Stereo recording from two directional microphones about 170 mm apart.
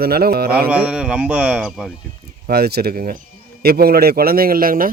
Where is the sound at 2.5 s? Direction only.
70° right (ahead or behind).